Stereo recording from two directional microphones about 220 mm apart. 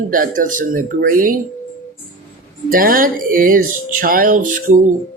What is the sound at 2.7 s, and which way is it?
Speech, 40° right (ahead or behind).